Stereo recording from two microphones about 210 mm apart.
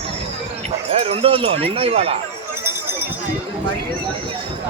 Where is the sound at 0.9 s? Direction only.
30° right (ahead or behind).